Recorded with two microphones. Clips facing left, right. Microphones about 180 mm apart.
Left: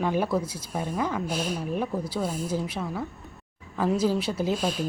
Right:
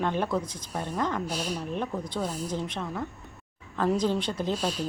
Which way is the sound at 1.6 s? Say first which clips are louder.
Left 3 dB; 10° left (ahead or behind).